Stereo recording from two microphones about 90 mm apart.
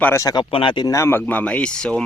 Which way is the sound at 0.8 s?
35° left (ahead or behind).